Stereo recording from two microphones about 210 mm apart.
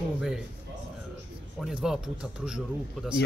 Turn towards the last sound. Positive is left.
turn(degrees=-5)  # may be behind; listen again after turning